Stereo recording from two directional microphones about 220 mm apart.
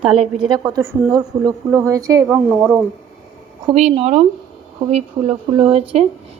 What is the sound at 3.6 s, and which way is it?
Speech, 30° right (ahead or behind).